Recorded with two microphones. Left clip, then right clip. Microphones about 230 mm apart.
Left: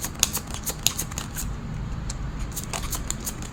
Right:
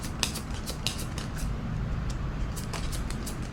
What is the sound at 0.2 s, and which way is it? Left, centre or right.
Scissors, left.